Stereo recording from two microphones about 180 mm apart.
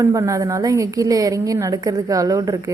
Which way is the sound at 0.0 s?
15° right (ahead or behind).